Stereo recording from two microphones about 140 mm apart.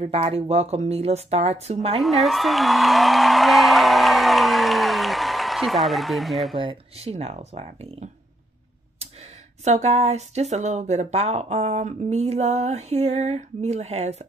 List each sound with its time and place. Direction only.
0.0 s speech: 50° right (ahead or behind)
2.0 s speech: centre (ahead or behind)
6.5 s speech: 40° right (ahead or behind)
9.7 s speech: 50° right (ahead or behind)